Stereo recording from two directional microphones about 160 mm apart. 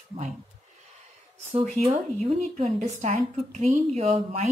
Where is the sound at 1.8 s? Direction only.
40° right (ahead or behind).